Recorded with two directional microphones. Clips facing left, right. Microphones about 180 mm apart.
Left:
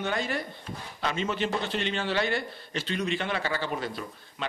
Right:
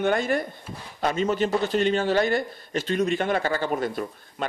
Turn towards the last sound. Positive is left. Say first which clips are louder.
# right 6 dB
turn(degrees=-50)  # may be behind; listen again after turning